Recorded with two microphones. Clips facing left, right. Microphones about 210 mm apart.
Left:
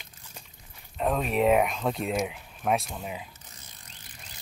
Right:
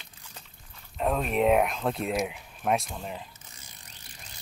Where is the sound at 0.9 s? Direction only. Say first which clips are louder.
Even; centre (ahead or behind).